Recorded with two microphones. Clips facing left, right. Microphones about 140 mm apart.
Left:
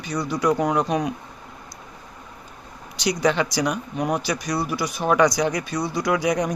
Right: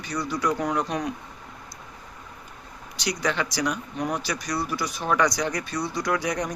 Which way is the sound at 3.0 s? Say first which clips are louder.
Left 6 dB; 20° left (ahead or behind).